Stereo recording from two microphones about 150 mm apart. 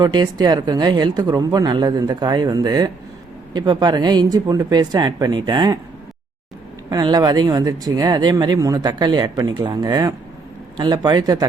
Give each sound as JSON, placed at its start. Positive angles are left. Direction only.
{"t": 0.0, "sound": "speech", "side_deg": -25}
{"t": 6.9, "sound": "speech", "side_deg": -25}